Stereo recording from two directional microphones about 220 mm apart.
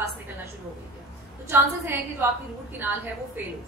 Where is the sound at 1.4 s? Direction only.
10° right (ahead or behind).